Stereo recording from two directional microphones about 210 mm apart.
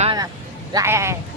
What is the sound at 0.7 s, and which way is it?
Speech, 15° right (ahead or behind).